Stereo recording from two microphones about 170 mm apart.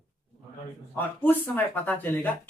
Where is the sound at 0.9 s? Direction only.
10° left (ahead or behind).